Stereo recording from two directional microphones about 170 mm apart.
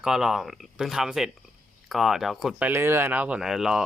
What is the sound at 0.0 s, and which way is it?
Speech, 5° right (ahead or behind).